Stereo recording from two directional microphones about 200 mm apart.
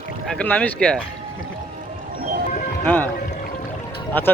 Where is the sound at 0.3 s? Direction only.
5° left (ahead or behind).